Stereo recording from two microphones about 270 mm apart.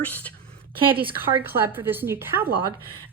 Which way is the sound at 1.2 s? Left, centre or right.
Centre.